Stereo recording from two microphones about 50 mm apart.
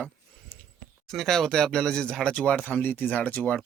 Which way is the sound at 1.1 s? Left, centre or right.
Centre.